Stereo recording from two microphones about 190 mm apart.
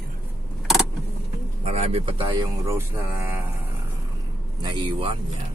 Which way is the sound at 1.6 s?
30° right (ahead or behind).